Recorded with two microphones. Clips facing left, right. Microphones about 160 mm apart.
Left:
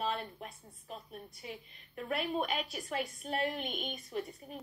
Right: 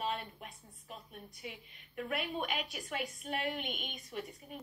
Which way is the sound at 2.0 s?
35° left (ahead or behind).